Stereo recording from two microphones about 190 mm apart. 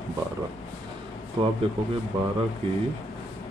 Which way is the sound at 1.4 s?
25° right (ahead or behind).